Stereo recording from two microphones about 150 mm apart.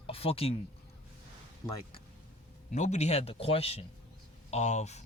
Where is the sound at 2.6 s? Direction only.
55° left (ahead or behind).